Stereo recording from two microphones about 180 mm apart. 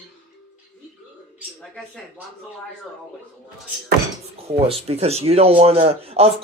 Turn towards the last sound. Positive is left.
turn(degrees=-35)  # may be behind; listen again after turning